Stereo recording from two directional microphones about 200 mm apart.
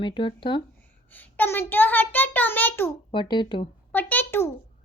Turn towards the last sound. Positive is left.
turn(degrees=10)  # may be behind; listen again after turning